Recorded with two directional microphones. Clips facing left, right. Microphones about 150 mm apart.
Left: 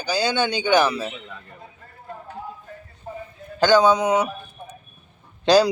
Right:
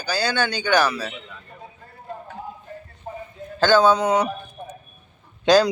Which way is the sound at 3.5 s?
15° left (ahead or behind).